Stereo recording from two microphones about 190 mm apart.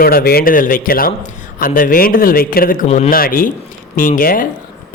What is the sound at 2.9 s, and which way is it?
Speech, 35° left (ahead or behind).